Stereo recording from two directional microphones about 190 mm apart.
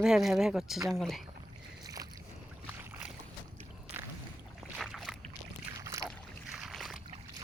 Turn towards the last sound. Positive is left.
turn(degrees=0)  # may be behind; listen again after turning